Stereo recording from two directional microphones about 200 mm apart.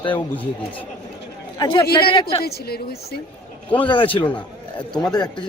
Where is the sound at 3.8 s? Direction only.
25° left (ahead or behind).